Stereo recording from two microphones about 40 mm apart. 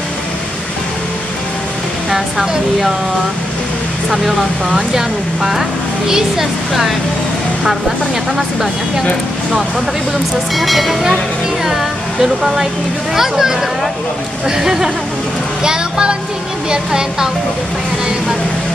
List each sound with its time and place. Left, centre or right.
2.0 s speech: centre
4.1 s speech: centre
10.5 s speech: centre
11.6 s a sound: centre
13.1 s a child's voice: centre